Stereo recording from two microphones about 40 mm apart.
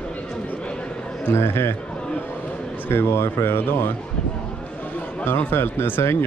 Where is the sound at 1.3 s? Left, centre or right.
Left.